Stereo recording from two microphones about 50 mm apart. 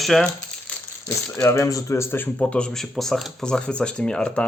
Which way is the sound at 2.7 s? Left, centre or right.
Centre.